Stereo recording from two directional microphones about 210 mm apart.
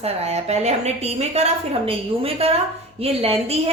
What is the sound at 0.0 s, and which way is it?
A woman's voice, 30° right (ahead or behind).